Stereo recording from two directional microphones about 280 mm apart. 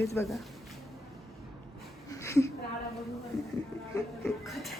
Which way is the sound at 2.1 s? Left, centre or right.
Centre.